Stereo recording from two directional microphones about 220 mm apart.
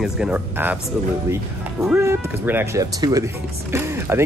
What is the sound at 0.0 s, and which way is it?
Speech, 5° right (ahead or behind).